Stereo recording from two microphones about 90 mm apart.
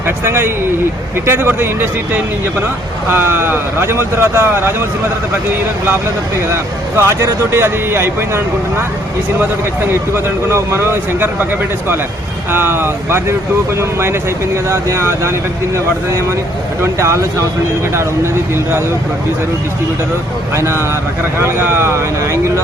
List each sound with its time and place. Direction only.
0.3 s speech: 25° right (ahead or behind)
3.1 s speech: 25° right (ahead or behind)
6.5 s speech: 30° right (ahead or behind)
10.2 s speech: 30° right (ahead or behind)
12.5 s speech: 25° right (ahead or behind)
16.8 s speech: 30° right (ahead or behind)
20.6 s speech: 30° right (ahead or behind)